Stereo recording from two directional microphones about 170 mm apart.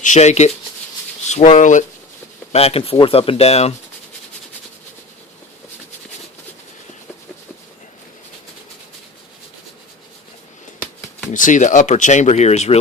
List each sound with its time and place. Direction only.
0.0 s speech: 45° left (ahead or behind)
11.3 s speech: 50° left (ahead or behind)